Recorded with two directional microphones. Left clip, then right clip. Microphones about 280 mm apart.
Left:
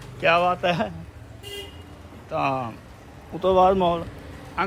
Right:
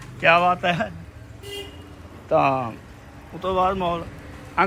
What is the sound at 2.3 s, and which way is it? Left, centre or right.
Speech, centre.